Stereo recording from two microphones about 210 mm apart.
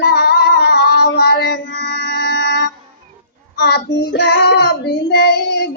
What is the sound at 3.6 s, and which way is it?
Child singing, 50° left (ahead or behind).